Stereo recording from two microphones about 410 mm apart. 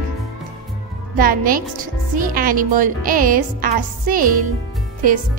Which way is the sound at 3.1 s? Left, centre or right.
Right.